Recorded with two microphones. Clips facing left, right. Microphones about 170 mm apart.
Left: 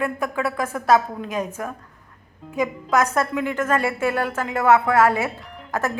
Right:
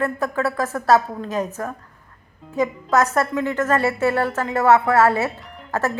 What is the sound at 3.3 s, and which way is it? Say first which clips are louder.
Speech: right 2 dB; 15° left (ahead or behind).